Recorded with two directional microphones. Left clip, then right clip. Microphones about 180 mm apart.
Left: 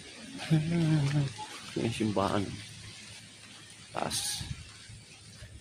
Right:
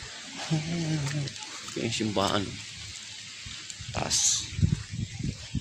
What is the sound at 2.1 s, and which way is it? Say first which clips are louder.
Speech: right 3 dB; 10° right (ahead or behind).